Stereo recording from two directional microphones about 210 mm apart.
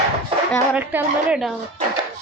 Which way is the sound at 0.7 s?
5° right (ahead or behind).